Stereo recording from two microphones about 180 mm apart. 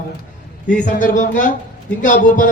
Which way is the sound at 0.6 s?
45° left (ahead or behind).